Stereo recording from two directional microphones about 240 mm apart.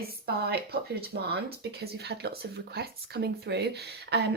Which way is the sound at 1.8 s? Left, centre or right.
Right.